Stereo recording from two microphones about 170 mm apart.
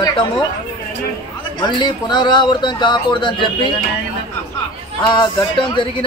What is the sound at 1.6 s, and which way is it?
Speech, 25° left (ahead or behind).